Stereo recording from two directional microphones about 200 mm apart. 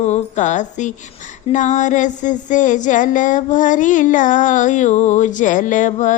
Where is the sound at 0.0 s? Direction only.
35° left (ahead or behind).